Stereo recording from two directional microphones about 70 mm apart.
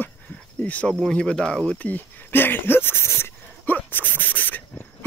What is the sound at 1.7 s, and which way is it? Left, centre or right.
Speech, left.